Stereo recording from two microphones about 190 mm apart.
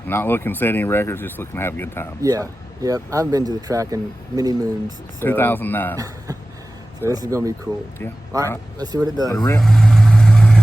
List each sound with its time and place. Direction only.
0.1 s speech: 10° left (ahead or behind)
2.2 s speech: 15° right (ahead or behind)
5.2 s speech: 10° left (ahead or behind)
7.0 s speech: 15° right (ahead or behind)
8.8 s speech: 20° right (ahead or behind)
9.4 s vehicle: 5° left (ahead or behind)